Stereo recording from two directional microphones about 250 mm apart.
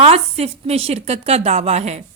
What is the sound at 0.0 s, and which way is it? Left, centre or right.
A woman's voice, right.